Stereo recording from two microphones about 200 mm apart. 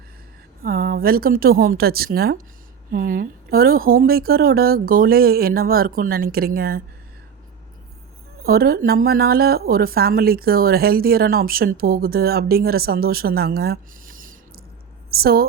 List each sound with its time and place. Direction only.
0.6 s speech: 50° right (ahead or behind)
8.4 s a woman's voice: 50° right (ahead or behind)